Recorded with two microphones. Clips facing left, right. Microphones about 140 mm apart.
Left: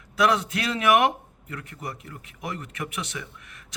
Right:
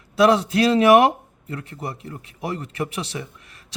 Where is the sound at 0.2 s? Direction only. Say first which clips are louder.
Right 7 dB; 30° right (ahead or behind).